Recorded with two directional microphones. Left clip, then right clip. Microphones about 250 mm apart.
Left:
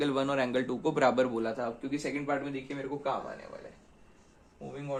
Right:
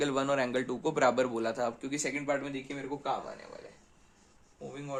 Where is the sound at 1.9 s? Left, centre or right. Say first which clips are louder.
Even; right.